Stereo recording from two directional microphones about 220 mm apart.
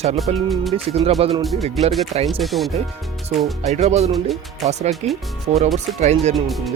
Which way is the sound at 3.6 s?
30° right (ahead or behind).